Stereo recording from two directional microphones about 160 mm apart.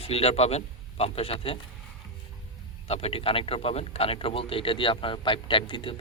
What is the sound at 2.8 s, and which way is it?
Speech, 40° left (ahead or behind).